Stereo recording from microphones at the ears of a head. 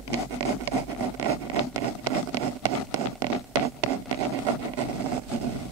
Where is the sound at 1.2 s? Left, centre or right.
Right.